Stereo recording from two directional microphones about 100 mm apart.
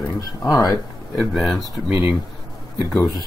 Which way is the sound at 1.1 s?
Centre (ahead or behind).